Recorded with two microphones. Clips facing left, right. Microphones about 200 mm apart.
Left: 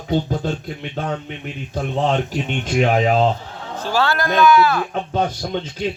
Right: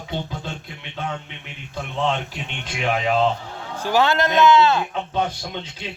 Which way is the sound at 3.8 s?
15° right (ahead or behind).